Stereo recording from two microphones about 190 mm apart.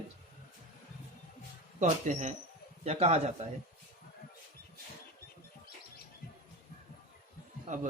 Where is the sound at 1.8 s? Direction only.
40° right (ahead or behind).